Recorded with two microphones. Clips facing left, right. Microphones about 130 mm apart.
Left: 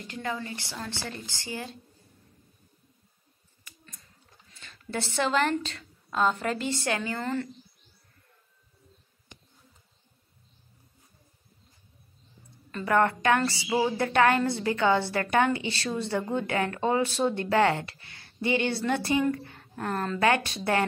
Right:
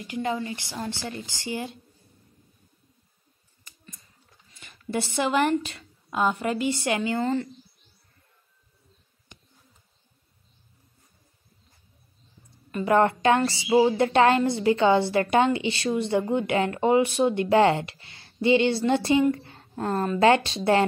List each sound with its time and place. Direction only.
0.0 s a woman's voice: 15° right (ahead or behind)
4.6 s a woman's voice: 10° right (ahead or behind)
12.7 s a woman's voice: 20° right (ahead or behind)